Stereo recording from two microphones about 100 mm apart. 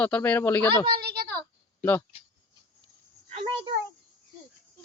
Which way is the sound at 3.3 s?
90° right.